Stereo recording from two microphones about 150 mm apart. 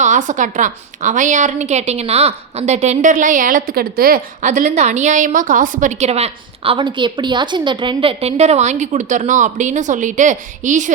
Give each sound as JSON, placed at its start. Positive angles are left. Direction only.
{"t": 0.0, "sound": "a woman's voice", "side_deg": -55}
{"t": 4.4, "sound": "a woman's voice", "side_deg": -55}